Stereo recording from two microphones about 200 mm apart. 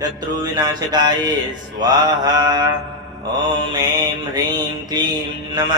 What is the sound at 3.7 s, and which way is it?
Speech, 20° right (ahead or behind).